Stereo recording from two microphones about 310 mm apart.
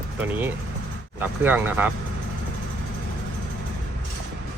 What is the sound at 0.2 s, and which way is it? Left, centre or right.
Speech, centre.